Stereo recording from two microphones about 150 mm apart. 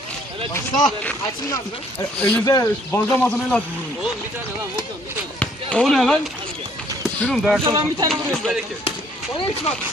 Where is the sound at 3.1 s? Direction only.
10° left (ahead or behind).